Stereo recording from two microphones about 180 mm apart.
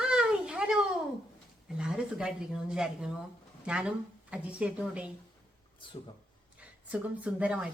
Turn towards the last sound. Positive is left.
turn(degrees=-5)  # may be behind; listen again after turning